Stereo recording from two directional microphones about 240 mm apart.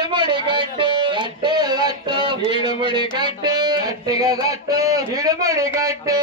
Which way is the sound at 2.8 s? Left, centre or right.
Centre.